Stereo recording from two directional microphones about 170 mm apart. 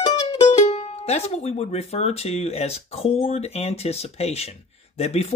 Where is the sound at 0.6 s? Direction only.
40° left (ahead or behind).